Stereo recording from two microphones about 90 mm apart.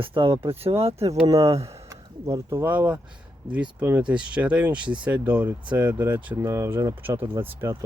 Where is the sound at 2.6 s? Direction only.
15° right (ahead or behind).